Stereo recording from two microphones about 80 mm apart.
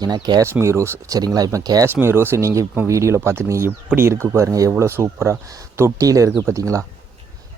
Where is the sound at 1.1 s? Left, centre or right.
Right.